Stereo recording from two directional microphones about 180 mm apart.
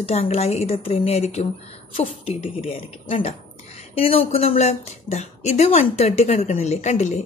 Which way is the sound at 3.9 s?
35° left (ahead or behind).